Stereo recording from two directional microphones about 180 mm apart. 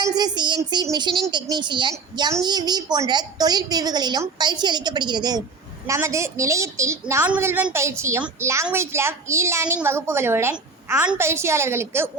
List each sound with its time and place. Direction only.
0.0 s a woman's voice: 20° right (ahead or behind)